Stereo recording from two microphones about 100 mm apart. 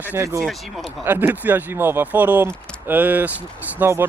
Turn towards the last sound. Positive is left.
turn(degrees=-25)  # may be behind; listen again after turning